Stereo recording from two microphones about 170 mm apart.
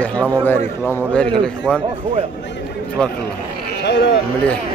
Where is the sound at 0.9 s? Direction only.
5° left (ahead or behind).